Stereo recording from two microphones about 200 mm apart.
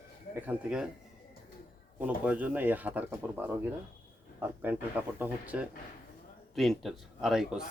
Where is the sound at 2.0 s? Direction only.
5° right (ahead or behind).